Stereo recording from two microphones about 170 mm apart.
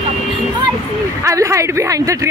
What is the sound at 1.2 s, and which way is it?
Speech, 15° right (ahead or behind).